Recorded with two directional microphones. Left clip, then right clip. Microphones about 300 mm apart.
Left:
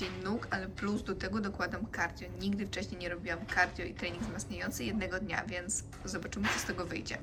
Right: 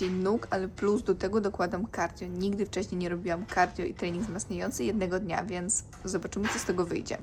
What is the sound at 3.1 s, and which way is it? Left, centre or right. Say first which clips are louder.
A woman's voice: right 3 dB; centre.